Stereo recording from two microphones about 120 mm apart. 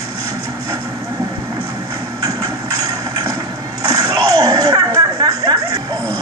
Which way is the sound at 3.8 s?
30° right (ahead or behind).